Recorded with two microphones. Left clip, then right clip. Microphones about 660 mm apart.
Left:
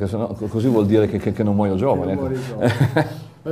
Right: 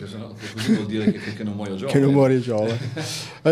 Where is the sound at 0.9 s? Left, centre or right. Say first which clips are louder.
Left 8 dB; left.